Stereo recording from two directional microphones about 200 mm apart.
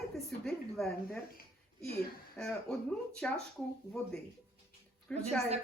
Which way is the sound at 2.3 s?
5° left (ahead or behind).